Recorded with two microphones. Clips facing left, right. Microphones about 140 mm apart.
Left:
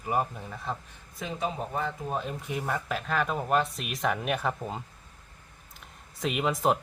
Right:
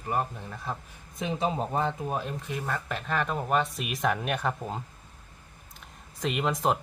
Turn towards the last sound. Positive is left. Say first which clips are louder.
# left 1 dB
turn(degrees=0)  # may be behind; listen again after turning